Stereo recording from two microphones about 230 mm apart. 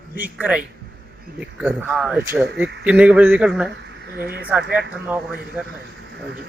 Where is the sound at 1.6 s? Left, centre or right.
Centre.